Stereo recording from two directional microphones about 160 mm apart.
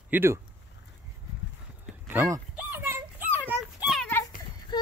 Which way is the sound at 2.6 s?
15° right (ahead or behind).